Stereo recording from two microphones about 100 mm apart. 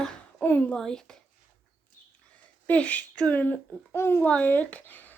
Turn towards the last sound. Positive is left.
turn(degrees=15)  # may be behind; listen again after turning